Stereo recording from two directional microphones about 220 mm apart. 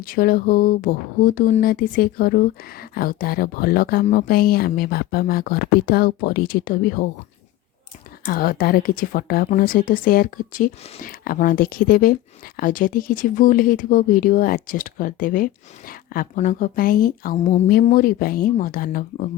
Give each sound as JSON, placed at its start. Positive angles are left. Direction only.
{"t": 0.0, "sound": "a woman's voice", "side_deg": 40}
{"t": 8.2, "sound": "a woman's voice", "side_deg": 40}